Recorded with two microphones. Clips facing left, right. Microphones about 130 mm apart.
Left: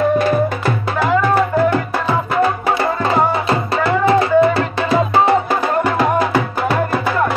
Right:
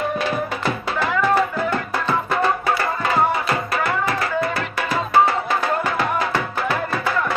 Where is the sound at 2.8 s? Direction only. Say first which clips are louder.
Left 4 dB; 25° left (ahead or behind).